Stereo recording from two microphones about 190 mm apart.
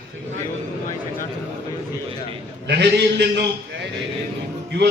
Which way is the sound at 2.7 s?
60° right (ahead or behind).